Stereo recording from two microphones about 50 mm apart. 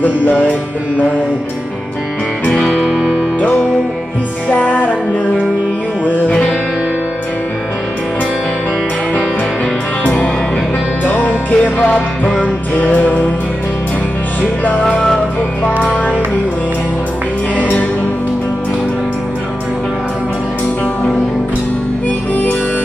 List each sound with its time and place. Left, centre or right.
0.0 s music: left
2.6 s music: centre
2.9 s music: centre
3.3 s music: left
10.0 s music: left
14.8 s music: centre
15.0 s music: centre
17.6 s music: left
22.3 s music: left